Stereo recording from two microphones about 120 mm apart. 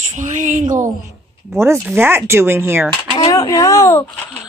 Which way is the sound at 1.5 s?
20° right (ahead or behind).